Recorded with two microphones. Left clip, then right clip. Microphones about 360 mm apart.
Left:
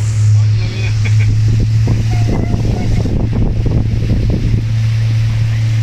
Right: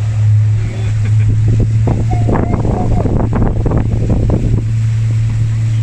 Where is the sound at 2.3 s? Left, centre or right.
Right.